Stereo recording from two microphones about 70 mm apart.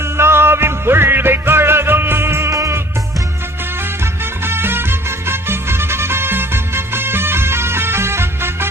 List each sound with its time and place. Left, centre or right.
0.0 s music: right